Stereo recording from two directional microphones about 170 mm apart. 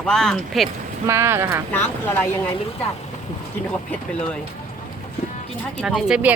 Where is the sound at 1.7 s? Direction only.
10° left (ahead or behind).